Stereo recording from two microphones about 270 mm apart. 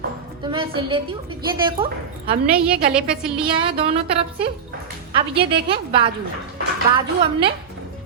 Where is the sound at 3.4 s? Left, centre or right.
Centre.